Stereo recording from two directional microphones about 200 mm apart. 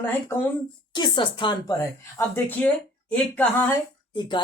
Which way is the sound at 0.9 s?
20° left (ahead or behind).